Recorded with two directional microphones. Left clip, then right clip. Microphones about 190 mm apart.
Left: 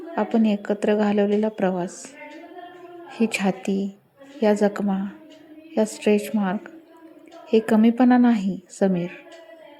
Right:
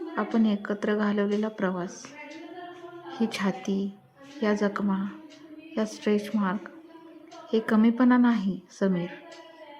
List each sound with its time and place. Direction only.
0.2 s a woman's voice: 20° left (ahead or behind)
3.1 s a woman's voice: 20° left (ahead or behind)